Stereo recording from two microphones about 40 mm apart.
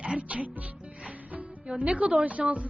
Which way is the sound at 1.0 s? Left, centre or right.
Right.